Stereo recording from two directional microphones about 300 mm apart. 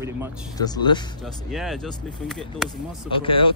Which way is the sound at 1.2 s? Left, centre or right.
Centre.